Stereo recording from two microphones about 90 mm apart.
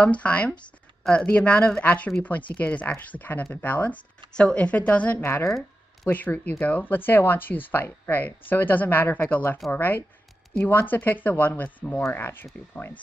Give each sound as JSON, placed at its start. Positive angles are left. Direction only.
{"t": 0.0, "sound": "speech", "side_deg": 15}
{"t": 5.2, "sound": "speech", "side_deg": 25}